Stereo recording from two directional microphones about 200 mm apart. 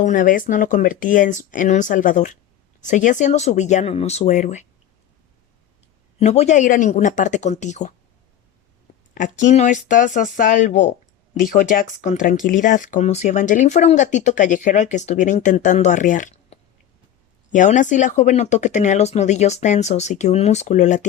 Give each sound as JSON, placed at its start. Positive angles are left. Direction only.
{"t": 0.0, "sound": "speech", "side_deg": 40}
{"t": 6.1, "sound": "speech", "side_deg": 35}
{"t": 9.1, "sound": "speech", "side_deg": 40}